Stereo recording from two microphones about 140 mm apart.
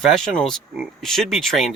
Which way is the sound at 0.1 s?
5° left (ahead or behind).